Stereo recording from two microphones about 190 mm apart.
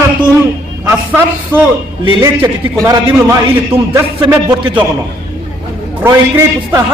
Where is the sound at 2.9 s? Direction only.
15° right (ahead or behind).